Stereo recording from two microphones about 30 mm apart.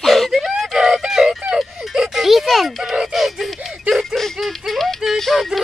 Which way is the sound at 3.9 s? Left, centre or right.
Centre.